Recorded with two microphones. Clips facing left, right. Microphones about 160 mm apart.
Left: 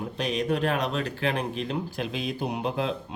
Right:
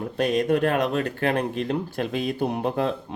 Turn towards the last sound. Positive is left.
turn(degrees=-50)  # may be behind; listen again after turning